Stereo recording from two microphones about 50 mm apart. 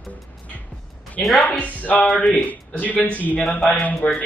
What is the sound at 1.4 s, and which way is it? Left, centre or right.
A man's voice, left.